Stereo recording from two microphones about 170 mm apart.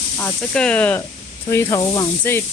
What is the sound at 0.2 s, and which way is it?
Speech, 10° left (ahead or behind).